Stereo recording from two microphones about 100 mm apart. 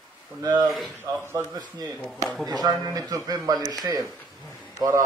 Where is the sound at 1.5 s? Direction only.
40° right (ahead or behind).